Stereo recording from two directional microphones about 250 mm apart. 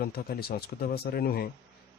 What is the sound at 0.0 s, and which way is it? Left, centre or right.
Speech, left.